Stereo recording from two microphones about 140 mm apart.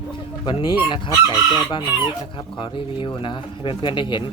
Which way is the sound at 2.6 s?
35° left (ahead or behind).